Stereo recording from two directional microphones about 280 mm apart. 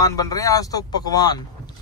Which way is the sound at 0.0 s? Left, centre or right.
Centre.